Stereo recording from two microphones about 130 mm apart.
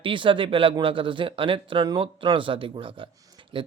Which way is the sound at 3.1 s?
25° right (ahead or behind).